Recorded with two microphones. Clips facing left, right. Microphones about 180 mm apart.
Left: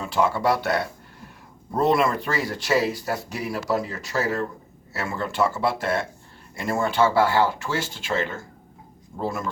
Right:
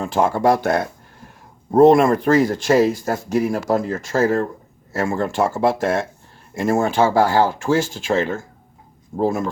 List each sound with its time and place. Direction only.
0.0 s speech: 50° right (ahead or behind)